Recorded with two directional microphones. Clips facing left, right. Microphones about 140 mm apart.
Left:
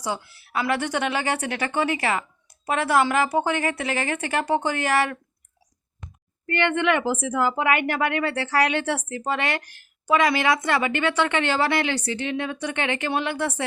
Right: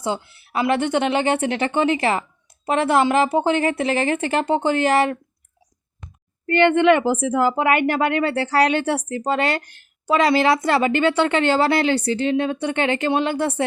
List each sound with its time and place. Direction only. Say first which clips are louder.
0.0 s a woman's voice: right 4 dB; 20° right (ahead or behind)
6.5 s speech: right 7 dB; 30° right (ahead or behind)